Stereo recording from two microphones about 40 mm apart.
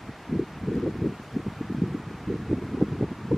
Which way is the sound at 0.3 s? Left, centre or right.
Centre.